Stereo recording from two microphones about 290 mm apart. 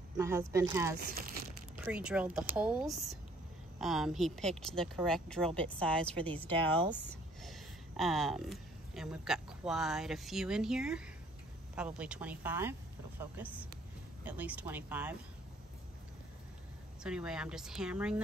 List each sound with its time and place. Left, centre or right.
0.2 s speech: centre
0.9 s speech: right
1.9 s speech: centre
14.2 s speech: centre
17.0 s speech: centre